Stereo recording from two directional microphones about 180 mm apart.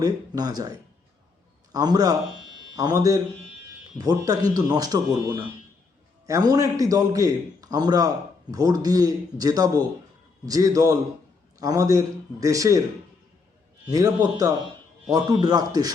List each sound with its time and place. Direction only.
0.0 s a man's voice: 20° right (ahead or behind)
13.9 s a man's voice: 20° right (ahead or behind)